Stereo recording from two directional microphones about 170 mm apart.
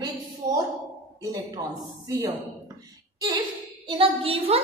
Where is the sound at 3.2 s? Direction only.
20° right (ahead or behind).